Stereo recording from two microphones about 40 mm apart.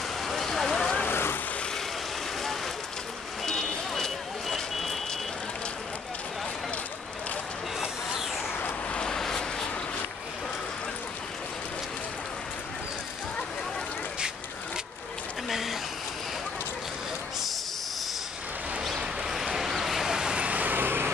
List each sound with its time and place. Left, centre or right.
0.3 s fire: centre
1.0 s vehicle: left
3.4 s vehicle: centre
9.0 s vehicle: centre
15.5 s a sound: centre
18.9 s a sound: centre
20.3 s vehicle: right
20.7 s vehicle: right